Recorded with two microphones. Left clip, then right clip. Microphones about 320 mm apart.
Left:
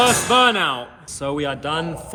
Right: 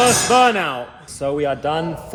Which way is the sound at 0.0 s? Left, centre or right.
Centre.